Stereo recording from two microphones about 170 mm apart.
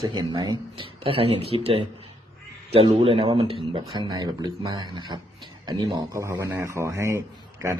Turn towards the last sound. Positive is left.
turn(degrees=-15)  # may be behind; listen again after turning